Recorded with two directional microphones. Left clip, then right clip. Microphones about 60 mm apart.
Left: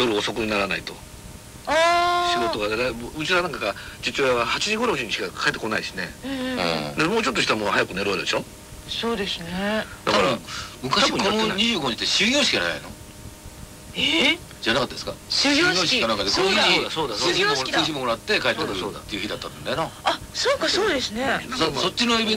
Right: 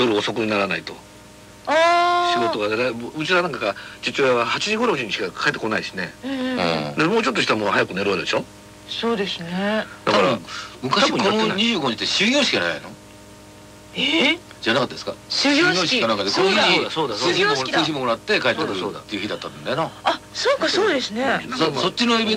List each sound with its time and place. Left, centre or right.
0.0 s speech: right
13.9 s speech: right